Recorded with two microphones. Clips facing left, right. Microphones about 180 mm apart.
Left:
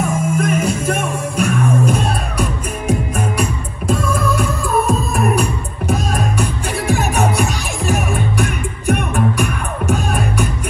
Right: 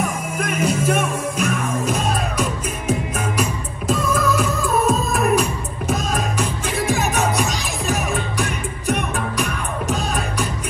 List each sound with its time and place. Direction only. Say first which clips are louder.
0.5 s music: left 2 dB; 55° left (ahead or behind)